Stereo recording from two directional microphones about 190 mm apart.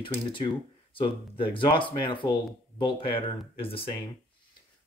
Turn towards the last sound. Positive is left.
turn(degrees=30)  # may be behind; listen again after turning